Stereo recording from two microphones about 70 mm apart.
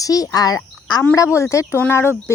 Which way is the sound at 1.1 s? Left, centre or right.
Left.